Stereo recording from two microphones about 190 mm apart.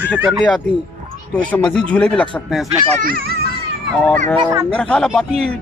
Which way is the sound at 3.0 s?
50° right (ahead or behind).